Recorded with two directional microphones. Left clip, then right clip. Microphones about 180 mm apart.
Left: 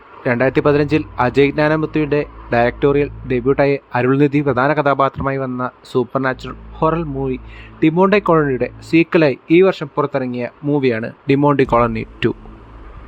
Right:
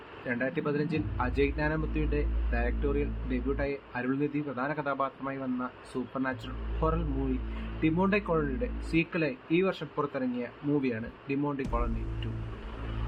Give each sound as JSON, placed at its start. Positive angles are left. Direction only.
{"t": 0.3, "sound": "speech", "side_deg": 65}